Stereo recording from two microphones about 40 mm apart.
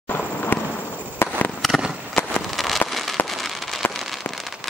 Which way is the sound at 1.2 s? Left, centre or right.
Left.